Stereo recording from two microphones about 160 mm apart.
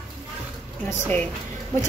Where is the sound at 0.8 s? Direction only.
10° left (ahead or behind).